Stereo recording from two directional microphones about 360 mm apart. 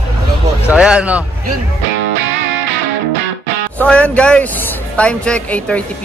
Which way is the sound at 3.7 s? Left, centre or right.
Centre.